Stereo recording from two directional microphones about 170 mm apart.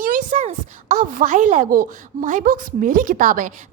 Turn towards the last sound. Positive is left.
turn(degrees=-50)  # may be behind; listen again after turning